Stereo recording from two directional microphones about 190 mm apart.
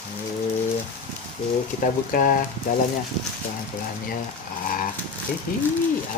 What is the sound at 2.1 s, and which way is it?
Speech, 45° left (ahead or behind).